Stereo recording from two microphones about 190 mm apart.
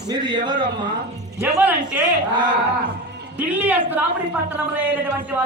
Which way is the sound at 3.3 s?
10° right (ahead or behind).